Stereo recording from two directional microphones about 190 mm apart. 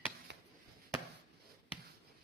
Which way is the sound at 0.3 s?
65° right (ahead or behind).